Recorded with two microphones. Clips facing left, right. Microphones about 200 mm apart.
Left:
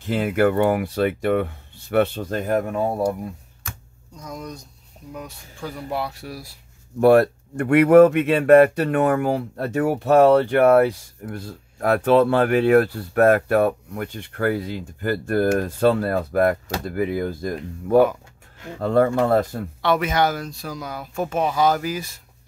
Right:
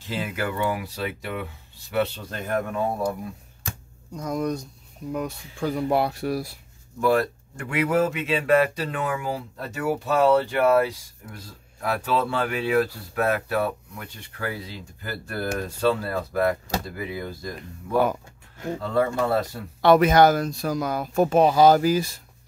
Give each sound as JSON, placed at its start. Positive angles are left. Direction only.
{"t": 0.0, "sound": "speech", "side_deg": 55}
{"t": 4.1, "sound": "speech", "side_deg": -55}
{"t": 7.0, "sound": "speech", "side_deg": 60}
{"t": 19.8, "sound": "speech", "side_deg": -40}